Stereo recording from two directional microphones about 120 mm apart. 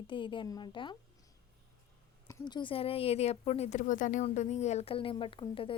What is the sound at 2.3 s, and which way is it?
Speech, 35° left (ahead or behind).